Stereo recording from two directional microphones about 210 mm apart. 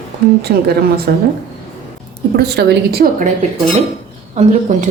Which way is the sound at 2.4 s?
50° right (ahead or behind).